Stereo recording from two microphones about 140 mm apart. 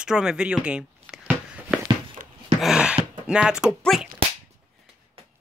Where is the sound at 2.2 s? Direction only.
75° right (ahead or behind).